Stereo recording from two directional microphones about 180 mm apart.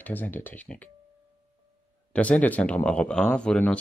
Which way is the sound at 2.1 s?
5° left (ahead or behind).